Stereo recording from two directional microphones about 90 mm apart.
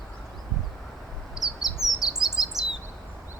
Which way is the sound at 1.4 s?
45° left (ahead or behind).